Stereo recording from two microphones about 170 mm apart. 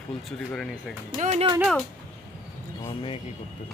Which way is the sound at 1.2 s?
40° right (ahead or behind).